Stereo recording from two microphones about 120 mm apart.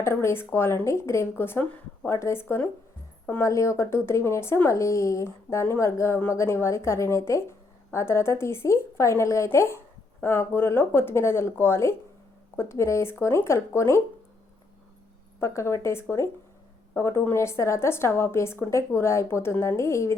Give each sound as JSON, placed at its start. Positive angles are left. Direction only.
{"t": 0.0, "sound": "speech", "side_deg": 20}
{"t": 15.4, "sound": "speech", "side_deg": 20}